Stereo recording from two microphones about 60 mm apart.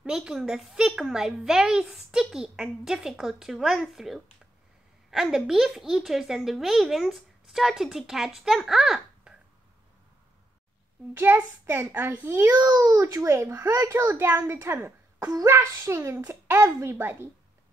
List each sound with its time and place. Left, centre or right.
0.0 s a woman's voice: centre
11.1 s a woman's voice: right
12.4 s a child's voice: right
13.1 s a child's voice: right
14.0 s a woman's voice: right
14.5 s a child's voice: right